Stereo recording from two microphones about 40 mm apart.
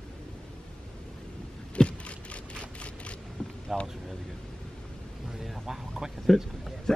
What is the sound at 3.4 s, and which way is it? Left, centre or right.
Boat, left.